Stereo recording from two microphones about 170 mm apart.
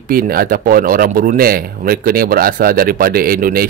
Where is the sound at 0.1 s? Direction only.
60° right (ahead or behind).